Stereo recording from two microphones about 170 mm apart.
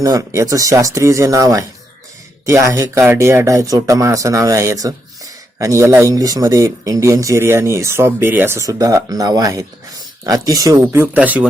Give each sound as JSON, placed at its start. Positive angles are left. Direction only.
{"t": 0.0, "sound": "speech", "side_deg": -20}